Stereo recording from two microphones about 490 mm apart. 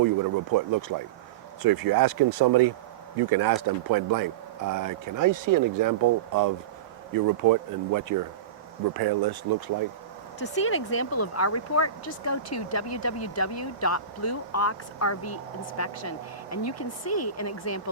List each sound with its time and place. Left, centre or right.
0.5 s speech: right
10.4 s speech: left